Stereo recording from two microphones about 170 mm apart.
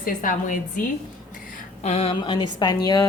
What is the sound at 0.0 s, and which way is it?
Speech, 55° left (ahead or behind).